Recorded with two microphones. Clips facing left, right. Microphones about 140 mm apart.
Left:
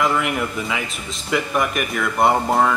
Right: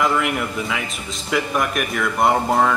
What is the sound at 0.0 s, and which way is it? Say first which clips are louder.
Speech: even; centre (ahead or behind).